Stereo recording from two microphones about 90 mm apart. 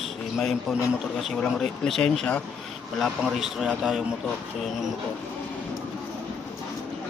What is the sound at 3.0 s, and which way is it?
A man's voice, 5° right (ahead or behind).